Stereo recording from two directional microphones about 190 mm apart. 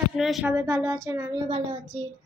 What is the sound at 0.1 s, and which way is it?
Speech, centre (ahead or behind).